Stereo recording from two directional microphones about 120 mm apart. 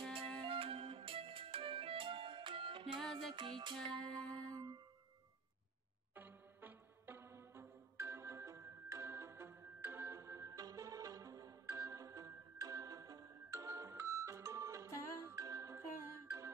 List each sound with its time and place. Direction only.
0.5 s music: 50° right (ahead or behind)
3.0 s music: 5° left (ahead or behind)
3.3 s music: 40° right (ahead or behind)
3.9 s music: 5° left (ahead or behind)
4.3 s music: 30° right (ahead or behind)
6.1 s music: 15° right (ahead or behind)